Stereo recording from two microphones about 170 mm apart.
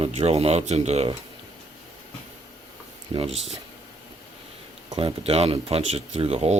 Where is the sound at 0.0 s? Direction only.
35° right (ahead or behind).